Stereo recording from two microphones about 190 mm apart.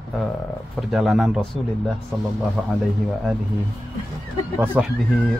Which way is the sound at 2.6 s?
5° left (ahead or behind).